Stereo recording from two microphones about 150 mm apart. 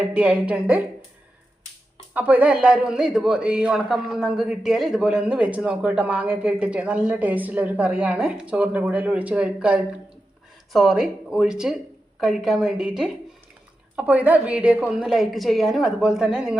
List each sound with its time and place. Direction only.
0.0 s a man's voice: 10° right (ahead or behind)
2.1 s a man's voice: 10° right (ahead or behind)